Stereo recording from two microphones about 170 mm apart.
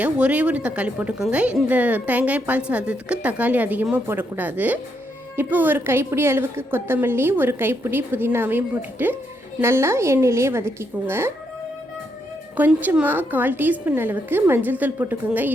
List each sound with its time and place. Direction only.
0.0 s a woman's voice: 10° right (ahead or behind)
12.5 s a woman's voice: 10° right (ahead or behind)